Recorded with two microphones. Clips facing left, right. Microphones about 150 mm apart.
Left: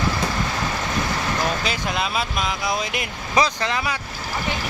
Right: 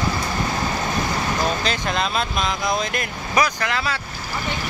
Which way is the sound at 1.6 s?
10° left (ahead or behind).